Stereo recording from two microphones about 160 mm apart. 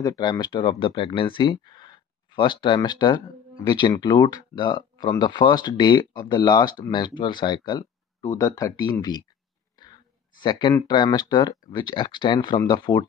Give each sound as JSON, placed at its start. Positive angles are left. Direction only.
{"t": 0.2, "sound": "speech", "side_deg": 25}
{"t": 10.4, "sound": "speech", "side_deg": 30}